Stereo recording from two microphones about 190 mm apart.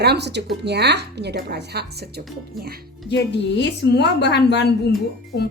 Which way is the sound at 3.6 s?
60° left (ahead or behind).